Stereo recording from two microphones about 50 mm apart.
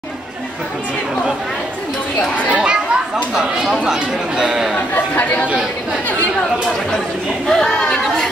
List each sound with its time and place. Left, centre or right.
2.5 s chatter: right
3.3 s speech: centre
4.7 s speech: left
7.4 s speech: centre